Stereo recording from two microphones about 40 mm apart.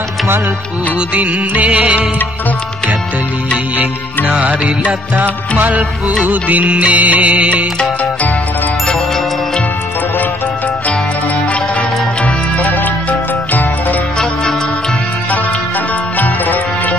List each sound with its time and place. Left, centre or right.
1.1 s music: right
4.3 s music: right
5.6 s music: right
12.2 s music: left
16.2 s music: left